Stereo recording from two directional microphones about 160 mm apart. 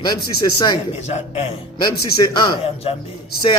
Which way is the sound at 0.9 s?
45° left (ahead or behind).